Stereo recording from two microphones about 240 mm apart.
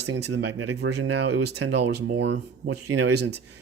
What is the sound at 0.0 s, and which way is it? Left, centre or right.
Speech, right.